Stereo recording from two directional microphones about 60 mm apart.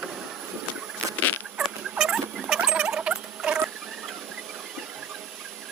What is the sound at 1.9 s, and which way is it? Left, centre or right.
Rodents, centre.